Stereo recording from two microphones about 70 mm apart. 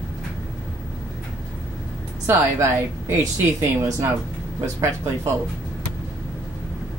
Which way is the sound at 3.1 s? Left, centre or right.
Right.